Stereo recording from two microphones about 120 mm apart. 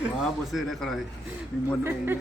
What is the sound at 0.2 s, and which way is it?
Speech, centre (ahead or behind).